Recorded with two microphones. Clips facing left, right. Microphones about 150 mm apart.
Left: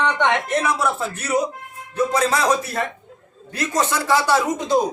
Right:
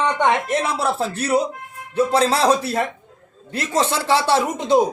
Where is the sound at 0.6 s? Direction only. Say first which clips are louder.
Even; 30° right (ahead or behind).